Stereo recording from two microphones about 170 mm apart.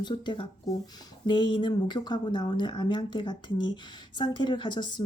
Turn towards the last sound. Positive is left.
turn(degrees=25)  # may be behind; listen again after turning